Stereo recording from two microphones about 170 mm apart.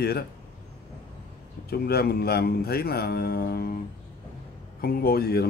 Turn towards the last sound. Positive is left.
turn(degrees=65)  # may be behind; listen again after turning